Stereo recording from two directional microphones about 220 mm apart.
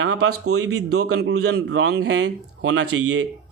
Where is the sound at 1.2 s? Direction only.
50° right (ahead or behind).